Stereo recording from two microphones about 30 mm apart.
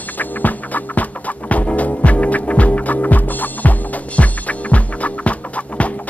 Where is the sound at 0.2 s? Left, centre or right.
Left.